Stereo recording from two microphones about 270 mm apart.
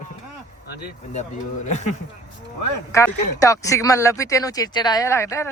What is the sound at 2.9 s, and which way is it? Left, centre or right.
Speech, centre.